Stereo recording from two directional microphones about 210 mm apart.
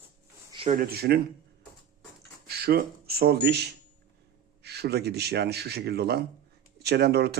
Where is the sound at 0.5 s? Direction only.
25° right (ahead or behind).